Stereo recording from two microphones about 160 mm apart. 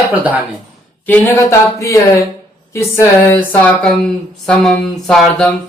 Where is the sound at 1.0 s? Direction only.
15° left (ahead or behind).